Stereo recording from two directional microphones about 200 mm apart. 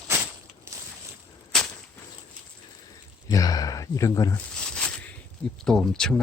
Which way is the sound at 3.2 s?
20° left (ahead or behind).